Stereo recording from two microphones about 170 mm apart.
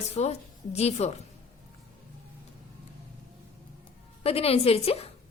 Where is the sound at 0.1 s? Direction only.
40° left (ahead or behind).